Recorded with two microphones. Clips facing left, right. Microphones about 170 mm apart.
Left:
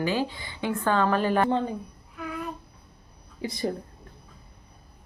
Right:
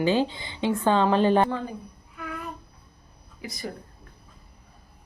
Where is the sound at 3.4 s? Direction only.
30° left (ahead or behind).